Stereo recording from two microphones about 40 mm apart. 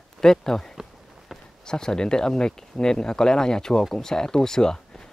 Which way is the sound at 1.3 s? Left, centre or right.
Centre.